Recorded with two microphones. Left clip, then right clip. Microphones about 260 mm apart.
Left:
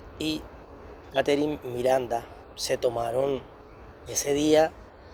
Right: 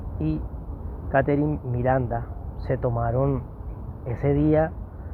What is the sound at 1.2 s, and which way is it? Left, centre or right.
Speech, left.